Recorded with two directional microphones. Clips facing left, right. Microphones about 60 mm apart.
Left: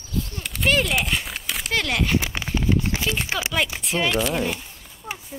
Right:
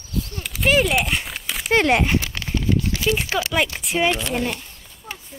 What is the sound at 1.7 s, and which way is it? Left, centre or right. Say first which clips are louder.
Speech: right 6 dB; right.